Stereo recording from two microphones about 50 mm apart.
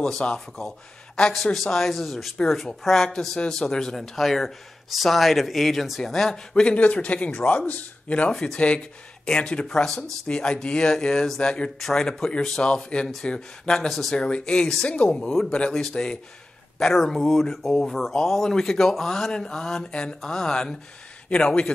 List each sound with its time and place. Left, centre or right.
0.0 s speech: centre
6.5 s speech: left
8.3 s speech: centre
8.5 s speech: left
13.8 s speech: centre
14.1 s speech: centre